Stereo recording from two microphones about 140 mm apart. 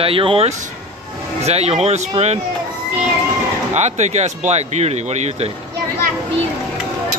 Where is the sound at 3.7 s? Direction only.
55° right (ahead or behind).